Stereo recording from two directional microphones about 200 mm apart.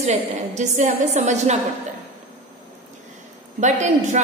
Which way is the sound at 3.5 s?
35° right (ahead or behind).